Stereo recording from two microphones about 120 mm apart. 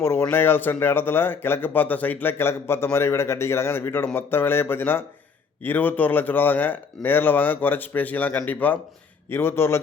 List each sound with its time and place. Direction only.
0.0 s speech: 20° left (ahead or behind)